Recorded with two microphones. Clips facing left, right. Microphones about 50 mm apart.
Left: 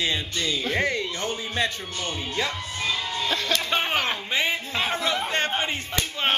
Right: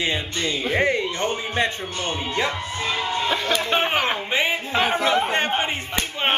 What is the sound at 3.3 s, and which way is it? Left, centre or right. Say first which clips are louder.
Speech: right 2 dB; centre.